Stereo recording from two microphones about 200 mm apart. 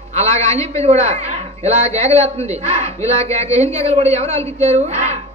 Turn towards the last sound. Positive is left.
turn(degrees=-35)  # may be behind; listen again after turning